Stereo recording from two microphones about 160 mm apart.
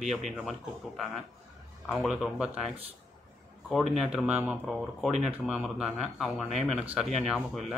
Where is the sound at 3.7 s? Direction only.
Centre (ahead or behind).